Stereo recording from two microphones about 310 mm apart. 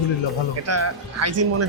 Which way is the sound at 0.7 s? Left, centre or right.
Right.